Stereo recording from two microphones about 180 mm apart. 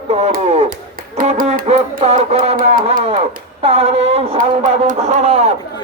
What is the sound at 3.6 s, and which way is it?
Speech, 35° right (ahead or behind).